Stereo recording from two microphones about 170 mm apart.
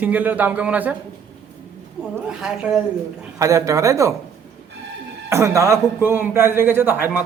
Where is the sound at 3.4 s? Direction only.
20° right (ahead or behind).